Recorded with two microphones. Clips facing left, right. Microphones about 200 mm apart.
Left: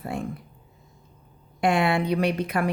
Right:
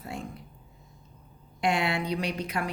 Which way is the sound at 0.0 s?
55° left (ahead or behind).